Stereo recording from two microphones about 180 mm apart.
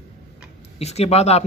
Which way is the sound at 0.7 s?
35° left (ahead or behind).